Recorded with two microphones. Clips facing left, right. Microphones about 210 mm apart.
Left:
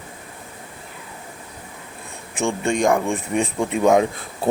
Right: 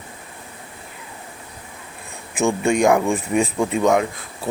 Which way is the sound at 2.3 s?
5° right (ahead or behind).